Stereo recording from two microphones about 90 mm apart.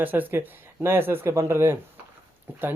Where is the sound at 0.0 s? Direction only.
20° right (ahead or behind).